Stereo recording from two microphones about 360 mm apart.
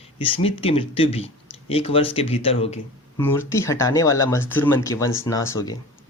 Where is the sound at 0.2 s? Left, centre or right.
Centre.